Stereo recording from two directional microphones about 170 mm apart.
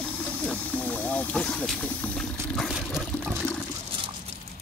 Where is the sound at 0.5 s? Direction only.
10° left (ahead or behind).